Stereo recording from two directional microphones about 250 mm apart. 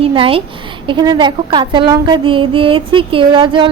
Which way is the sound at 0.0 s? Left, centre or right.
Right.